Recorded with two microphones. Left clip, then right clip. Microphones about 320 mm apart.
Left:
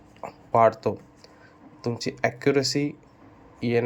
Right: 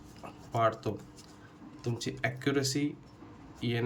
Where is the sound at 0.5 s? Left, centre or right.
Centre.